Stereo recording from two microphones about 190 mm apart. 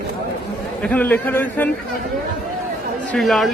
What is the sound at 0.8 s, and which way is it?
Speech, 10° left (ahead or behind).